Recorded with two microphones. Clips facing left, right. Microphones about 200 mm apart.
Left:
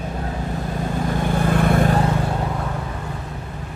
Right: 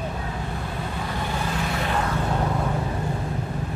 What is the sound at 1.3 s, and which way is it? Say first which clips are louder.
Vehicle: left 11 dB; 55° left (ahead or behind).